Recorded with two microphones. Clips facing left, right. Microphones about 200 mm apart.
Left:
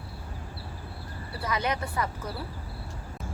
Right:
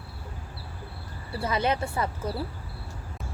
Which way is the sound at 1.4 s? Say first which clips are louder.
Right 3 dB; 25° right (ahead or behind).